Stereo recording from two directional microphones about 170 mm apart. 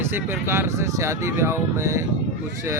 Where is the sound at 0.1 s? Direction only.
15° right (ahead or behind).